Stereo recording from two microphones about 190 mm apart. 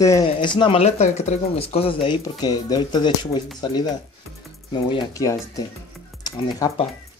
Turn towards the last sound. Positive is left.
turn(degrees=20)  # may be behind; listen again after turning